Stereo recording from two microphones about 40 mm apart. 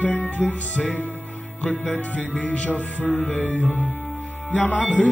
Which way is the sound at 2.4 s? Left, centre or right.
Left.